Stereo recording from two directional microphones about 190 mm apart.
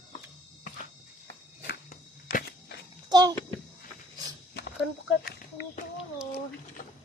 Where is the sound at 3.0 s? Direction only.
20° right (ahead or behind).